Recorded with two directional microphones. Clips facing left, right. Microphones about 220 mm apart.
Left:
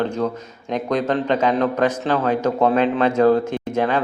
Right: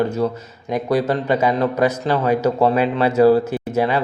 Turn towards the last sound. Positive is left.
turn(degrees=-10)  # may be behind; listen again after turning